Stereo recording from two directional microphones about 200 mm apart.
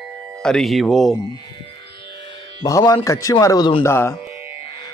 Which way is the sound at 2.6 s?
20° left (ahead or behind).